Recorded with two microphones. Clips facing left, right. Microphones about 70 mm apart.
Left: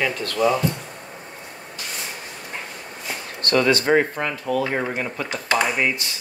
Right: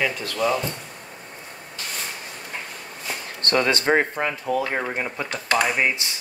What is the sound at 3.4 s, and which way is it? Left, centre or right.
Speech, right.